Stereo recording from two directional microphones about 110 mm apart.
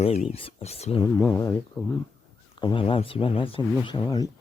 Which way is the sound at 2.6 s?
50° left (ahead or behind).